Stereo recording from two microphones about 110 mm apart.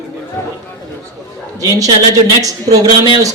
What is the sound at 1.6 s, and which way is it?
Speech, 30° right (ahead or behind).